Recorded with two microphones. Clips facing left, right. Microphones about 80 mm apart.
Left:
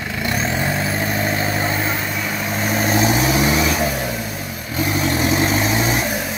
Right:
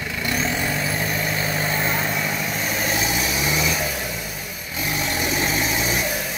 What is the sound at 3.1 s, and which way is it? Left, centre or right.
Vehicle, left.